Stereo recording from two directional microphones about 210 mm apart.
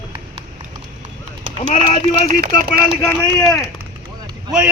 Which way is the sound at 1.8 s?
40° right (ahead or behind).